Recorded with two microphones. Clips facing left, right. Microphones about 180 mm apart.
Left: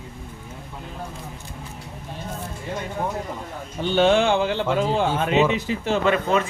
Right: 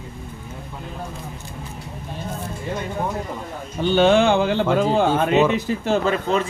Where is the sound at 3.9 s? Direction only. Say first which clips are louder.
Right 2 dB; 50° right (ahead or behind).